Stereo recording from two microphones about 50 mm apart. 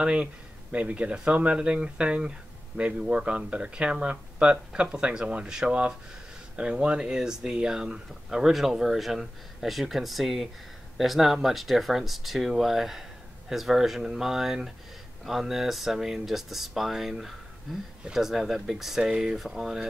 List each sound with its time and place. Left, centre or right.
0.0 s speech: centre